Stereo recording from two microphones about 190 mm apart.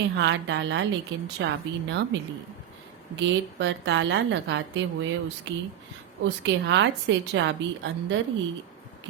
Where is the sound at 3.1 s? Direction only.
70° right (ahead or behind).